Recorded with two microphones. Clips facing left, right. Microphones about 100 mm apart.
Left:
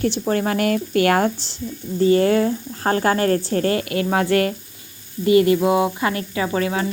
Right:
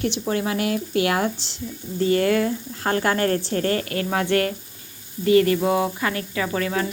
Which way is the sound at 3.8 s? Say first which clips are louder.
Left 4 dB; 20° left (ahead or behind).